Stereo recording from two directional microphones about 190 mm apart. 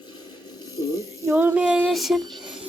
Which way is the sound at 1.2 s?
15° right (ahead or behind).